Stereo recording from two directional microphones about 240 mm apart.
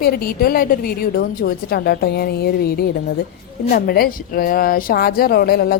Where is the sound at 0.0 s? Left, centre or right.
Left.